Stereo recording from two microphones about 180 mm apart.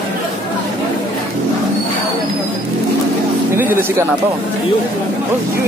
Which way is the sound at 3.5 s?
15° right (ahead or behind).